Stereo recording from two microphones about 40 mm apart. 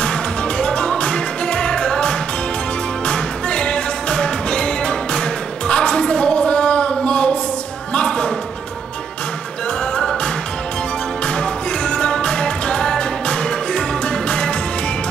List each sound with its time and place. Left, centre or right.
0.0 s music: left
7.9 s a sound: left
9.9 s music: left